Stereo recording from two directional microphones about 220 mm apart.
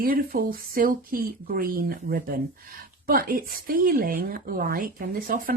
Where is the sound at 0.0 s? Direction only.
40° right (ahead or behind).